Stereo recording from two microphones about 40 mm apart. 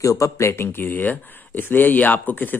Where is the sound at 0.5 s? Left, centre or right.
Left.